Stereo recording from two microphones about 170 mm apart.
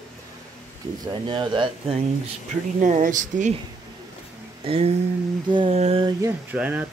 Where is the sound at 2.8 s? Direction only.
50° right (ahead or behind).